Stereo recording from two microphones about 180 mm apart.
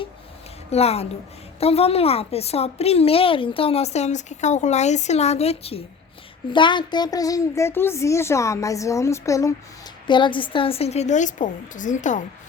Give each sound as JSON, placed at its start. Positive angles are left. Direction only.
{"t": 0.7, "sound": "a woman's voice", "side_deg": 35}